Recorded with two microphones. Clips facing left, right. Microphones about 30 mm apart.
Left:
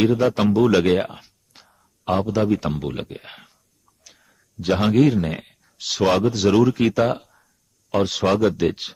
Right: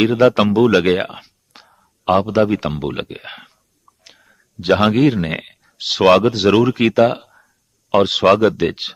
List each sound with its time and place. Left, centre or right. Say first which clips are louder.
0.0 s speech: right 5 dB; right
0.5 s a sound: right 3 dB; right
2.2 s speech: right 4 dB; right
2.7 s speech: right 4 dB; right
3.0 s speech: right 5 dB; right
4.1 s whispering: right 5 dB; right
4.6 s speech: right 4 dB; right
7.9 s speech: right 7 dB; right
8.4 s speech: right 3 dB; right